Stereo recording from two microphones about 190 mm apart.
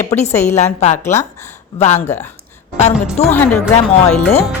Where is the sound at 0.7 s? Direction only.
35° left (ahead or behind).